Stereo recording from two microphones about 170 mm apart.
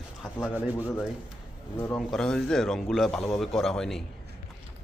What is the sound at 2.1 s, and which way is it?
A man's voice, 5° left (ahead or behind).